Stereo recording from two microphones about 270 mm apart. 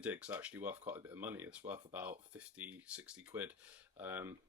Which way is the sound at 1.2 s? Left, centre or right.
Centre.